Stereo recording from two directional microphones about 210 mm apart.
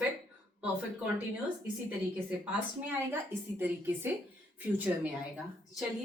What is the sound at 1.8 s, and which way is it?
A woman's voice, 5° right (ahead or behind).